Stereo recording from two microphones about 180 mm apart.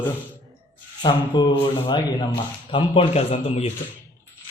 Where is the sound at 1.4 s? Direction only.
25° left (ahead or behind).